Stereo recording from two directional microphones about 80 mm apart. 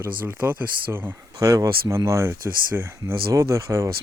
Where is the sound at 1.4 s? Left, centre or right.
Right.